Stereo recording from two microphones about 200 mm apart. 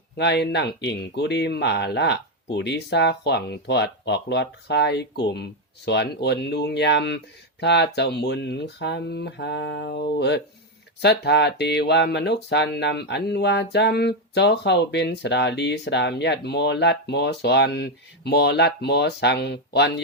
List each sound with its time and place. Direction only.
0.2 s speech: 55° left (ahead or behind)